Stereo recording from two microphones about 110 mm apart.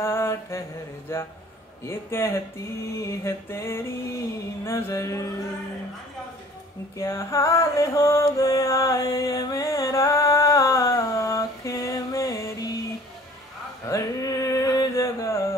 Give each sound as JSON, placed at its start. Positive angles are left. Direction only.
{"t": 0.0, "sound": "mantra", "side_deg": 25}
{"t": 1.1, "sound": "music", "side_deg": 25}
{"t": 7.0, "sound": "music", "side_deg": 25}
{"t": 13.8, "sound": "a sound", "side_deg": 30}